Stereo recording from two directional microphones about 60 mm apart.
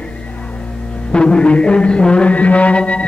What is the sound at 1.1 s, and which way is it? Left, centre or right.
Music, centre.